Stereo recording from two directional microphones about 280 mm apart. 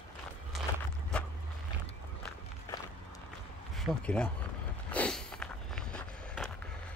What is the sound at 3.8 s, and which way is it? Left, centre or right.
Speech, centre.